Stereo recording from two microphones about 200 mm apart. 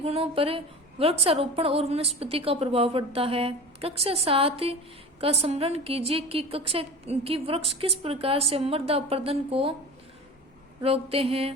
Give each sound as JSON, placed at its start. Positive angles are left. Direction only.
{"t": 0.0, "sound": "a woman's voice", "side_deg": -30}
{"t": 10.8, "sound": "a woman's voice", "side_deg": -30}